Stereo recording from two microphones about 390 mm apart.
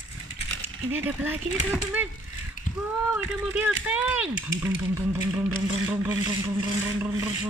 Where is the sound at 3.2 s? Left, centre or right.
Centre.